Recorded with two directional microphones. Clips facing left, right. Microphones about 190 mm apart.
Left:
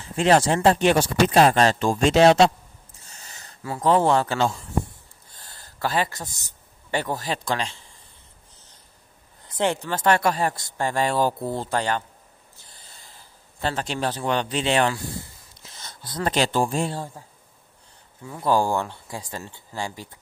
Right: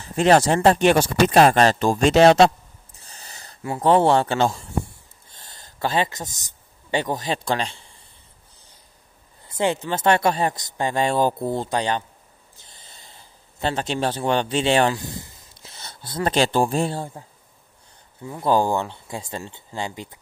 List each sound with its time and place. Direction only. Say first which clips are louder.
0.1 s speech: right 2 dB; 40° right (ahead or behind)
0.7 s speech: right 2 dB; 60° right (ahead or behind)
3.0 s a sound: right 3 dB; 35° right (ahead or behind)
3.6 s speech: right 3 dB; 25° right (ahead or behind)
5.3 s a sound: right 1 dB; 25° right (ahead or behind)
6.9 s speech: right 2 dB; 20° right (ahead or behind)
9.6 s speech: right 2 dB; 15° right (ahead or behind)
12.6 s a sound: right 2 dB; 20° right (ahead or behind)
13.6 s speech: right 3 dB; 25° right (ahead or behind)
15.9 s a sound: right 2 dB; 25° right (ahead or behind)
16.3 s speech: right 3 dB; 30° right (ahead or behind)
18.3 s speech: right 2 dB; 20° right (ahead or behind)